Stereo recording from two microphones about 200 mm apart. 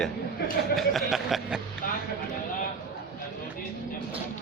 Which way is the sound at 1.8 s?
45° left (ahead or behind).